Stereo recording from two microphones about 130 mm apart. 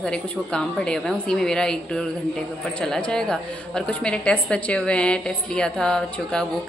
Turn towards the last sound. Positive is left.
turn(degrees=5)  # may be behind; listen again after turning